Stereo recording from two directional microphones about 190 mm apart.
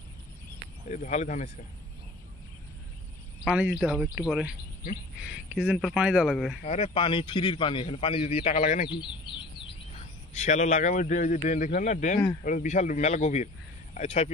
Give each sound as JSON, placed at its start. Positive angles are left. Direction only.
{"t": 0.8, "sound": "speech", "side_deg": 40}
{"t": 3.4, "sound": "speech", "side_deg": -5}
{"t": 6.6, "sound": "a man's voice", "side_deg": 35}
{"t": 8.8, "sound": "speech", "side_deg": 25}
{"t": 10.3, "sound": "speech", "side_deg": 40}